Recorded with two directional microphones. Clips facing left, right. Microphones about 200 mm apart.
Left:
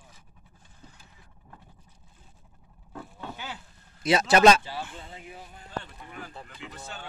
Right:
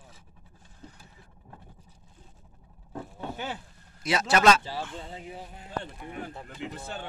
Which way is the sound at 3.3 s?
50° right (ahead or behind).